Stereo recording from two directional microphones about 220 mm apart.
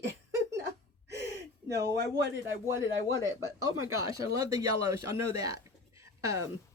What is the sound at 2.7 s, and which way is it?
Speech, 10° right (ahead or behind).